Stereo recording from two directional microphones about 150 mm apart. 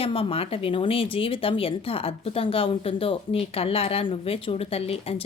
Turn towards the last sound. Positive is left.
turn(degrees=40)  # may be behind; listen again after turning